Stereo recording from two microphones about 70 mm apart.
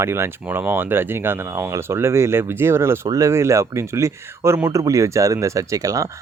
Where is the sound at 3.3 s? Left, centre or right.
Right.